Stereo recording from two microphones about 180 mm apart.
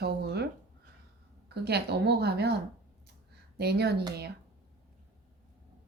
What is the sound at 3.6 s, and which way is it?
Speech, 65° right (ahead or behind).